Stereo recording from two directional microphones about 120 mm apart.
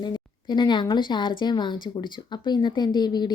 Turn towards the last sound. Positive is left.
turn(degrees=35)  # may be behind; listen again after turning